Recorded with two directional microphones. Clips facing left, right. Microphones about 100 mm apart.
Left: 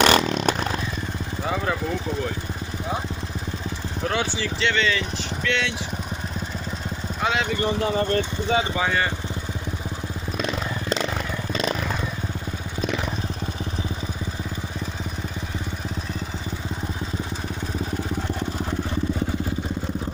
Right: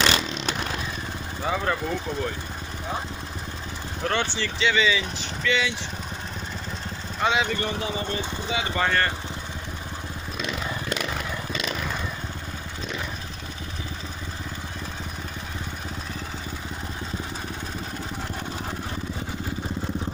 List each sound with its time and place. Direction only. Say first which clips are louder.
0.0 s vehicle: left 6 dB; 50° left (ahead or behind)
1.5 s speech: even; centre (ahead or behind)
4.0 s speech: left 1 dB; 5° left (ahead or behind)
7.2 s speech: right 1 dB; centre (ahead or behind)
7.8 s speech: left 7 dB; 50° left (ahead or behind)
8.7 s speech: even; 5° left (ahead or behind)
11.5 s vehicle: left 7 dB; 35° left (ahead or behind)